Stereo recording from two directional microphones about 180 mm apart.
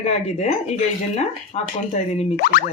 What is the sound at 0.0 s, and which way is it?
Speech, 35° left (ahead or behind).